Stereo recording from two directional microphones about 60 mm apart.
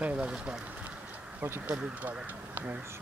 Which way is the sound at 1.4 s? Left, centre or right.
Right.